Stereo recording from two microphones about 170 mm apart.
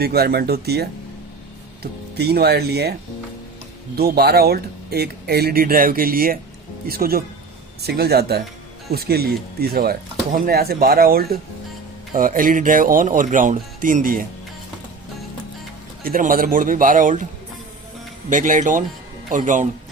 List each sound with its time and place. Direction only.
0.0 s speech: 65° right (ahead or behind)
3.9 s speech: 65° right (ahead or behind)
16.0 s speech: 55° right (ahead or behind)
18.3 s speech: 50° right (ahead or behind)